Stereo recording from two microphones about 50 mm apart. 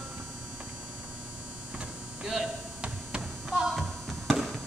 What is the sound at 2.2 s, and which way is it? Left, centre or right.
Tap, centre.